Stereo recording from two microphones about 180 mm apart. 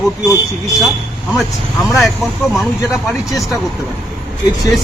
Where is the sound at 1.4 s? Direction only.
Centre (ahead or behind).